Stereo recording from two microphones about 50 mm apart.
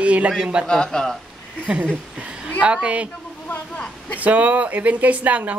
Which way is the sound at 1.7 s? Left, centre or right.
Centre.